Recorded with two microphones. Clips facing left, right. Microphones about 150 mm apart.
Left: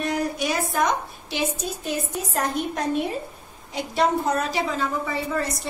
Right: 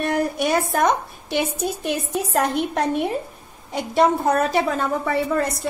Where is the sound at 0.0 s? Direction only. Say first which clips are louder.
Right 4 dB; 60° right (ahead or behind).